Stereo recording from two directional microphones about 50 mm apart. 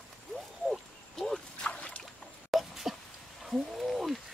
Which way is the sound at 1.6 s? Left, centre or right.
Left.